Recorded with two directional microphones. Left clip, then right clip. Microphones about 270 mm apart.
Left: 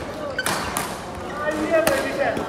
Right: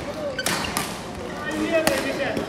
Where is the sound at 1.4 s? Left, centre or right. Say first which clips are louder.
Left 3 dB; centre.